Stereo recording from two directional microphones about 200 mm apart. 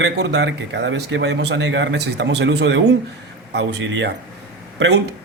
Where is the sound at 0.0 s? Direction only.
60° right (ahead or behind).